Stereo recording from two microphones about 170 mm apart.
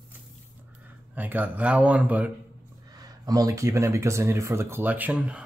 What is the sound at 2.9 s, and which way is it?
Speech, 20° right (ahead or behind).